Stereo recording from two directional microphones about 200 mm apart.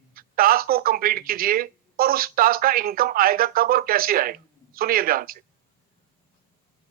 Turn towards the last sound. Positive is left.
turn(degrees=-45)  # may be behind; listen again after turning